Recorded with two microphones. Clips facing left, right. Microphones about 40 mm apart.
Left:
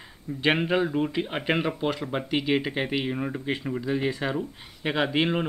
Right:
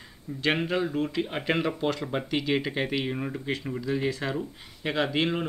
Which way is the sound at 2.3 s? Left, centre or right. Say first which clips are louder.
Left 3 dB; centre.